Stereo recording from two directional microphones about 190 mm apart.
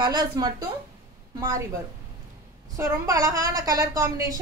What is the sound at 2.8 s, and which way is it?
A woman's voice, 15° right (ahead or behind).